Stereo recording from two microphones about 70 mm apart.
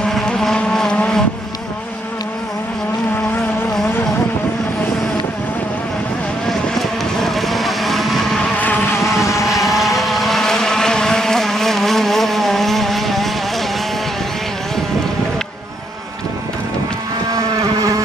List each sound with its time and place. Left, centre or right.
0.0 s vehicle: centre
6.4 s vehicle: centre
8.5 s vehicle: left
8.9 s vehicle: left
9.9 s vehicle: centre
17.3 s vehicle: right